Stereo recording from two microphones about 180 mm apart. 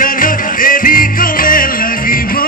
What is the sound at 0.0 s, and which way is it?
Music, 50° left (ahead or behind).